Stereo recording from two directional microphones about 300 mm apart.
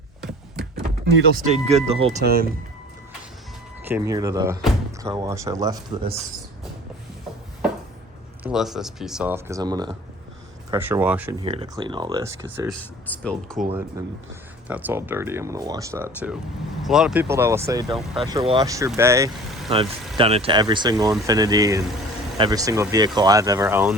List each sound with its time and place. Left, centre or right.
0.2 s a sound: centre
1.4 s speech: right
3.8 s speech: centre
6.0 s speech: right
8.4 s speech: centre
12.8 s speech: centre
14.7 s speech: centre
17.9 s speech: centre
18.3 s speech: centre
20.1 s speech: centre